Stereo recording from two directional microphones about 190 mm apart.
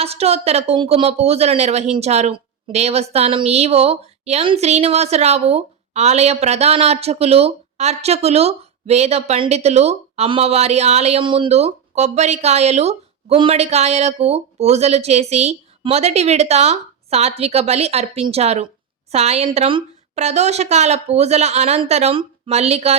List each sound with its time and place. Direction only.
0.0 s a woman's voice: 30° right (ahead or behind)